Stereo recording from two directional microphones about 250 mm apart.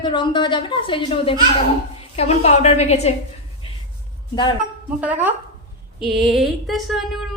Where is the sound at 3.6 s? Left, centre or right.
Left.